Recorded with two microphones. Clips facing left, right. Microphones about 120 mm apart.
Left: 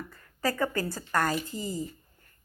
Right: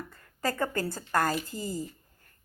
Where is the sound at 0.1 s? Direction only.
35° right (ahead or behind).